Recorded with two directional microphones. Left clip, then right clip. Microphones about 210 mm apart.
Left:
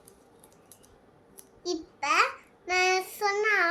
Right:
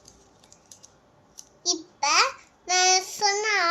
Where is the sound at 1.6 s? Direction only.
15° left (ahead or behind).